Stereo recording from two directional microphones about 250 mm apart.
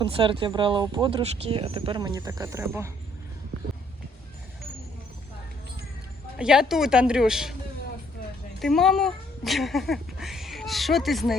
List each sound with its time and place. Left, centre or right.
0.0 s speech: right
6.4 s speech: centre
8.5 s speech: centre